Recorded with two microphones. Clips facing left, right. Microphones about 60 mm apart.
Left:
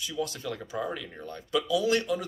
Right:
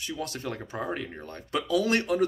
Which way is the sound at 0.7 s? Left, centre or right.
Right.